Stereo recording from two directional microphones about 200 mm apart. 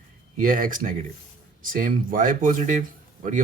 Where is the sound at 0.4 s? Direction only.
45° right (ahead or behind).